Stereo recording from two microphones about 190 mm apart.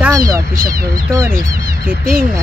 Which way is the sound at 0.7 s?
20° right (ahead or behind).